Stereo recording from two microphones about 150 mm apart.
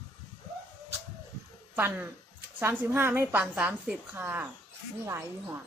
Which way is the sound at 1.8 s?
15° right (ahead or behind).